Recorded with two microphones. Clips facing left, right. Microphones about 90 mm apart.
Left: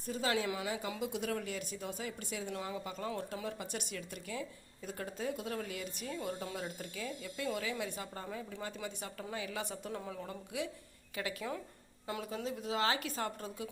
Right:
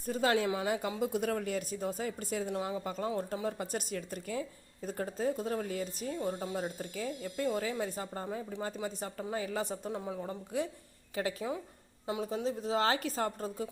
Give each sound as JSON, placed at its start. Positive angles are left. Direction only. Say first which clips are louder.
{"t": 0.0, "sound": "a woman's voice", "louder": "right 5 dB", "side_deg": -45}
{"t": 6.6, "sound": "a woman's voice", "louder": "right 5 dB", "side_deg": -40}
{"t": 9.9, "sound": "a woman's voice", "louder": "right 4 dB", "side_deg": -20}
{"t": 10.5, "sound": "a woman's voice", "louder": "right 5 dB", "side_deg": -35}
{"t": 12.0, "sound": "a woman's voice", "louder": "right 5 dB", "side_deg": -20}